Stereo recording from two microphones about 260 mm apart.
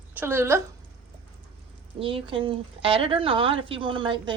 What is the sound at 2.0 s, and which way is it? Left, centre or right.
Speech, right.